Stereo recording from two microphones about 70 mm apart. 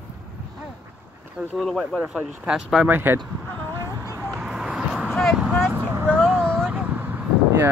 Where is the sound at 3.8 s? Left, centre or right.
Right.